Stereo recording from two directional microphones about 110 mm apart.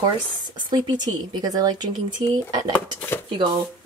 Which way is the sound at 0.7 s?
40° right (ahead or behind).